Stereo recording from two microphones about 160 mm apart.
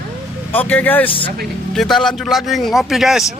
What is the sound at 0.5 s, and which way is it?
A man's voice, 10° left (ahead or behind).